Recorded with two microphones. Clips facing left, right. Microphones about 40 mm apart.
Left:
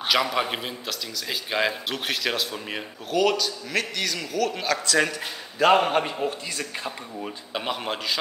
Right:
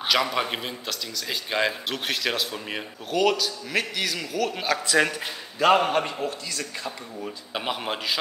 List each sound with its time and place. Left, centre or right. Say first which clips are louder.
0.0 s a man's voice: left 1 dB; centre
5.6 s a man's voice: left 1 dB; centre
6.5 s speech: left 1 dB; left
7.5 s a man's voice: even; centre